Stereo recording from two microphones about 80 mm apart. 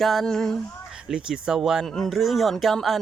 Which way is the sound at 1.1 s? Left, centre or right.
Centre.